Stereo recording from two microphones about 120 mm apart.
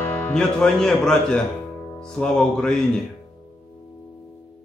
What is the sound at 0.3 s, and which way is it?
Speech, 5° left (ahead or behind).